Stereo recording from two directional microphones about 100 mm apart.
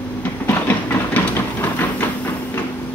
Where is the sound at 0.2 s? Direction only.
20° left (ahead or behind).